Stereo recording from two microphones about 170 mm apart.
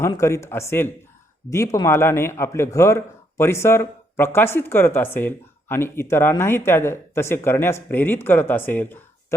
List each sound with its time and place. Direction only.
0.0 s speech: 15° left (ahead or behind)